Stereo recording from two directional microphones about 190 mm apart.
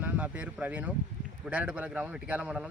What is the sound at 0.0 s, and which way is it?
Speech, 10° right (ahead or behind).